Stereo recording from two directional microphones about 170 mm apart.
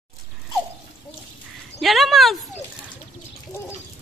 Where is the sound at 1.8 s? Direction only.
Centre (ahead or behind).